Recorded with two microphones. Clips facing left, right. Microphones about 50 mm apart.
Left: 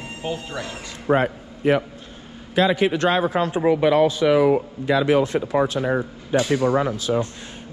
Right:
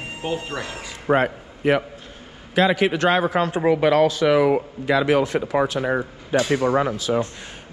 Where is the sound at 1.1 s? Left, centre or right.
Right.